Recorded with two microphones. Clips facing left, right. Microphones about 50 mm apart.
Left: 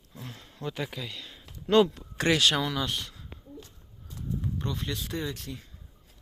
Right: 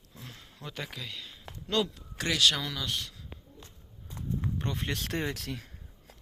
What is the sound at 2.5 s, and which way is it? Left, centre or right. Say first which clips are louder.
Speech: left 5 dB; centre.